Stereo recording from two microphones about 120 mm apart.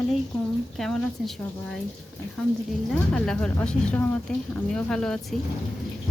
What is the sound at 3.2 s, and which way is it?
Frying, 10° left (ahead or behind).